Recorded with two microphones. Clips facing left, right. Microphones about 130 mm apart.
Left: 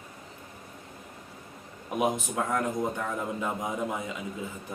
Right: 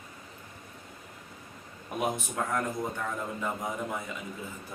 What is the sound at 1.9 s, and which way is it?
Speech, 20° left (ahead or behind).